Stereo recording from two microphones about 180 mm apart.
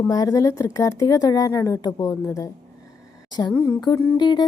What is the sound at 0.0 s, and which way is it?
A woman's voice, 20° left (ahead or behind).